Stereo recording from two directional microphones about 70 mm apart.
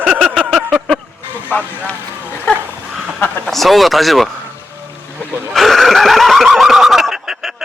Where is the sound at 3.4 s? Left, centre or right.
Centre.